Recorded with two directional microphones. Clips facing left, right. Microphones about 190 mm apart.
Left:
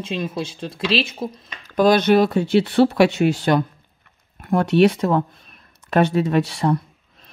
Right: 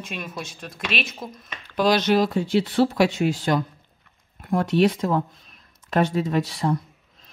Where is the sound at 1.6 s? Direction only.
50° left (ahead or behind); by 3.6 s 70° left (ahead or behind).